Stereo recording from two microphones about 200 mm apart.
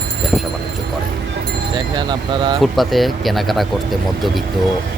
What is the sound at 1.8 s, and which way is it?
Speech, 20° right (ahead or behind).